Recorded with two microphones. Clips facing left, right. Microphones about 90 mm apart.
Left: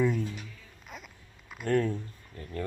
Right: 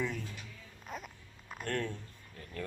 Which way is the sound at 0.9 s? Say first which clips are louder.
Right 3 dB; 40° right (ahead or behind).